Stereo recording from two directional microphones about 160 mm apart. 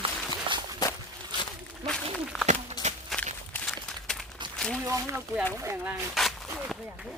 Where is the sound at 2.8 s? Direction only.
25° left (ahead or behind).